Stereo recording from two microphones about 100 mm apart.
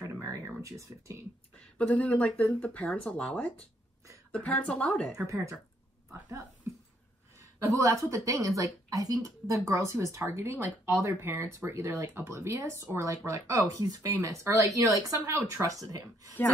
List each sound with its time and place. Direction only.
0.0 s a sound: 30° right (ahead or behind)
0.6 s speech: 30° right (ahead or behind)
1.8 s speech: 15° left (ahead or behind)
5.2 s speech: 30° right (ahead or behind)
7.5 s a woman's voice: 35° right (ahead or behind)